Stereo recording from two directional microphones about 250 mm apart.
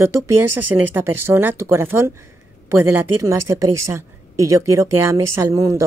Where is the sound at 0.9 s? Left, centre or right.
Centre.